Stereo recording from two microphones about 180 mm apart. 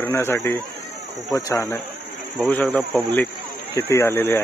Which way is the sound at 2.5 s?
5° left (ahead or behind).